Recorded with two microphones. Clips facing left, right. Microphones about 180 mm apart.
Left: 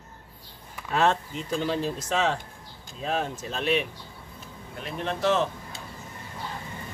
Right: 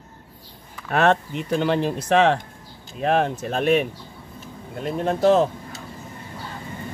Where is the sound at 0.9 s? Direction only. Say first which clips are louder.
Right 5 dB; 65° right (ahead or behind).